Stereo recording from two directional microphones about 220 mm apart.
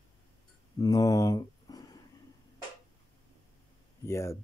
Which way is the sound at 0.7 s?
15° left (ahead or behind).